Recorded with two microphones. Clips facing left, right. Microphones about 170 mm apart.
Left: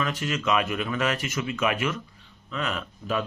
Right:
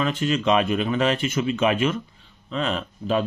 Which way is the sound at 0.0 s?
25° right (ahead or behind).